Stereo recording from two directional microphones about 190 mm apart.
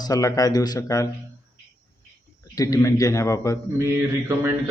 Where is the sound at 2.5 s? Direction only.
20° left (ahead or behind).